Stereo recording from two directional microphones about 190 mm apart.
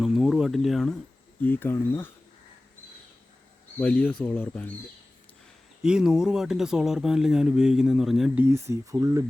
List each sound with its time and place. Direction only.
0.0 s speech: centre (ahead or behind)
3.8 s speech: 5° left (ahead or behind)
5.8 s speech: 5° right (ahead or behind)
8.4 s speech: 15° right (ahead or behind)